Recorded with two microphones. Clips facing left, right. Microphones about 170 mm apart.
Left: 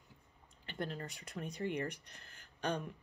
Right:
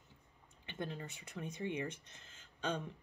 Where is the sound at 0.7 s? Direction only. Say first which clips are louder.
Left 2 dB; 20° right (ahead or behind).